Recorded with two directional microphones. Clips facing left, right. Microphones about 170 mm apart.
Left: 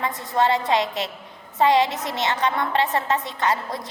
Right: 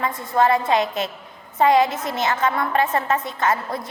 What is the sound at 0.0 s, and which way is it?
Speech, 20° left (ahead or behind).